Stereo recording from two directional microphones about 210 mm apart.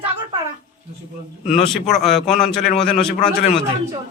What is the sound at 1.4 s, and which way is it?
Speech, 30° left (ahead or behind).